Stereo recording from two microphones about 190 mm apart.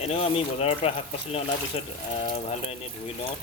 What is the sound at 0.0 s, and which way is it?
Speech, 30° left (ahead or behind).